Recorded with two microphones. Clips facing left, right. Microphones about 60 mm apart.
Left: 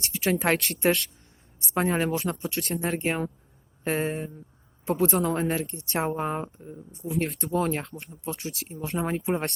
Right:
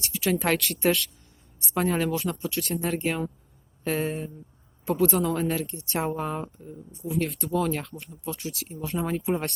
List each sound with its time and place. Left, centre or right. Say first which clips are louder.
0.0 s speech: left 1 dB; left
7.3 s speech: even; left
7.5 s speech: even; left
7.9 s speech: even; left
8.1 s speech: even; left
8.9 s speech: even; left